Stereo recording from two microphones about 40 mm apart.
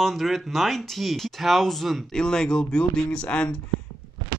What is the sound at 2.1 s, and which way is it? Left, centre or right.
Speech, centre.